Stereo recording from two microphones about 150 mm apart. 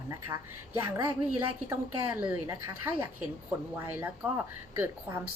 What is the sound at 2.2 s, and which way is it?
A woman's voice, 15° right (ahead or behind).